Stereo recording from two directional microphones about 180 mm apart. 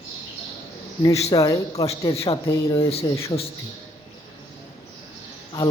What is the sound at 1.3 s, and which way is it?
Speech, 20° left (ahead or behind).